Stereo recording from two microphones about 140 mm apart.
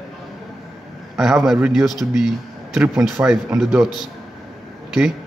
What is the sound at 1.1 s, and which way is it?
Speech, 5° right (ahead or behind).